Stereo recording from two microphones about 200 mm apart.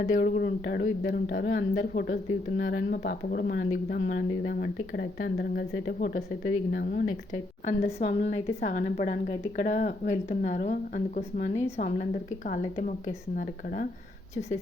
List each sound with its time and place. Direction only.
0.0 s speech: 45° left (ahead or behind)
7.9 s speech: 35° left (ahead or behind)